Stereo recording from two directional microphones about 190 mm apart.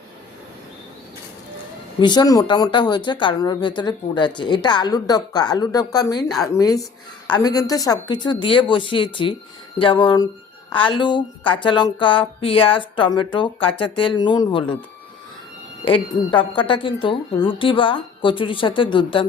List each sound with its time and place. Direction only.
2.0 s speech: 20° left (ahead or behind)
16.3 s speech: 25° left (ahead or behind)